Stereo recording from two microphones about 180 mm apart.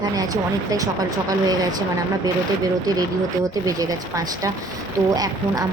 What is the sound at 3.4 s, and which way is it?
A woman's voice, 20° right (ahead or behind).